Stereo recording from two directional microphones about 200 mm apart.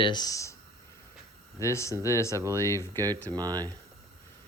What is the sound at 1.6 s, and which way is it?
Speech, 15° left (ahead or behind).